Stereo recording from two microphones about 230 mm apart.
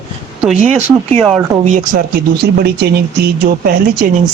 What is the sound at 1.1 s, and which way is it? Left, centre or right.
Speech, centre.